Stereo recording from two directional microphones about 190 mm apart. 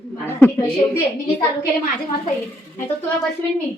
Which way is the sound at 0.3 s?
10° left (ahead or behind).